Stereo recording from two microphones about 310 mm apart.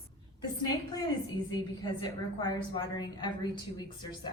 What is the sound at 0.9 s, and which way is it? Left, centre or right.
A woman's voice, centre.